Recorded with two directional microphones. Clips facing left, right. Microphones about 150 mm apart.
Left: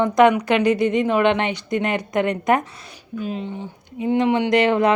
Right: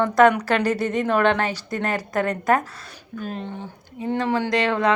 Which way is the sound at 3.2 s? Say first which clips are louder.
Left 4 dB; 50° right (ahead or behind).